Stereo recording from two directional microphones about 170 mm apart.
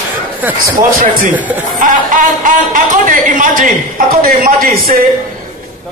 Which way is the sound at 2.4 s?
50° right (ahead or behind).